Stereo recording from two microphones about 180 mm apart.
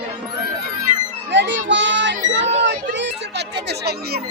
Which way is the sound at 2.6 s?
80° right.